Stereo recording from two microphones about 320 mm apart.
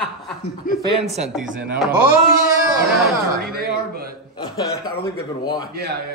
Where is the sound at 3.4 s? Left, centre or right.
Right.